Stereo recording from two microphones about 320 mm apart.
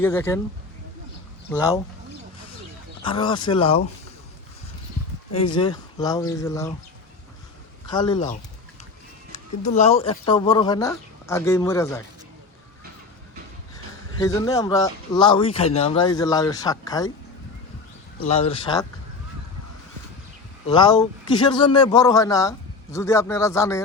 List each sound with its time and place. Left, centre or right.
0.0 s a man's voice: centre
1.5 s a man's voice: centre
3.0 s a man's voice: centre
5.5 s a man's voice: centre
7.9 s a man's voice: centre
9.6 s a man's voice: left
14.2 s a man's voice: centre
18.3 s a man's voice: centre
20.7 s a man's voice: centre